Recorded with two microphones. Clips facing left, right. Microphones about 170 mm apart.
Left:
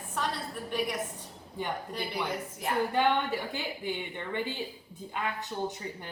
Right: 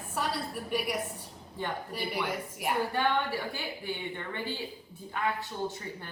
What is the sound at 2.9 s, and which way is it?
A woman's voice, 20° left (ahead or behind).